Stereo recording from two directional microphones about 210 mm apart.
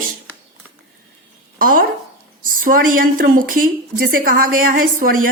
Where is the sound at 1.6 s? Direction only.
40° right (ahead or behind).